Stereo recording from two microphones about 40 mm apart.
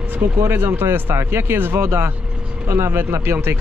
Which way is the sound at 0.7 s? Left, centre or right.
Right.